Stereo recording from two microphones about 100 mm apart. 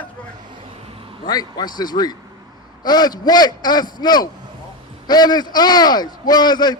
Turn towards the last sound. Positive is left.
turn(degrees=45)  # may be behind; listen again after turning